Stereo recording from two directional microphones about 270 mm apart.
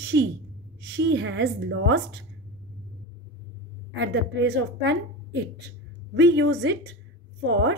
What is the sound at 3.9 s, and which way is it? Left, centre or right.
A woman's voice, right.